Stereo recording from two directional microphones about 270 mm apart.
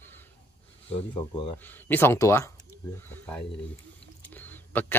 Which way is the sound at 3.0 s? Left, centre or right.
Centre.